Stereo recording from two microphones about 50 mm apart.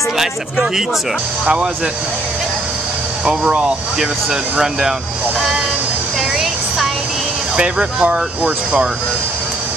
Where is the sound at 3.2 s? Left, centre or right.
Centre.